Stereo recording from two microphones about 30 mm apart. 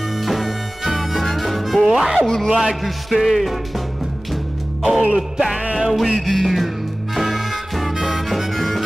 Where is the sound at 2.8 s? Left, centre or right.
Centre.